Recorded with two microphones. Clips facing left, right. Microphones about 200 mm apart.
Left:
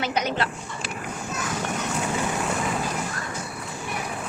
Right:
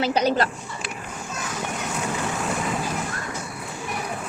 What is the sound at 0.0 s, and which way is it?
Speech, 30° right (ahead or behind).